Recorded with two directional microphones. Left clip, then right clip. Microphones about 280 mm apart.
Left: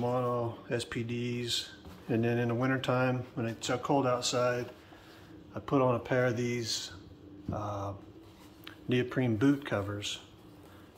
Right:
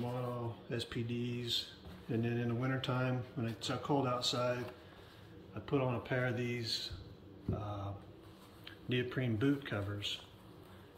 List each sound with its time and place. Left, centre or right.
0.1 s speech: centre